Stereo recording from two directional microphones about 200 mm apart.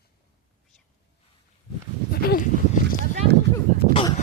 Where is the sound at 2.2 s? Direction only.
45° left (ahead or behind).